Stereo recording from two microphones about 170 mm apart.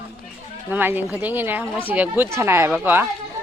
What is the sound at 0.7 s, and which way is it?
A woman's voice, 10° right (ahead or behind).